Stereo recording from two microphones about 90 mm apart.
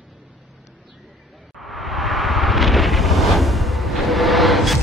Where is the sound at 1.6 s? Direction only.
Centre (ahead or behind).